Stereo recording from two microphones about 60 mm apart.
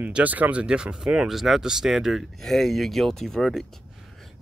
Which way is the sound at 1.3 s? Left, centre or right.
Centre.